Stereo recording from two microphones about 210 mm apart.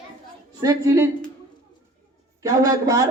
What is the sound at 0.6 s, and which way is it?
Speech, 15° right (ahead or behind).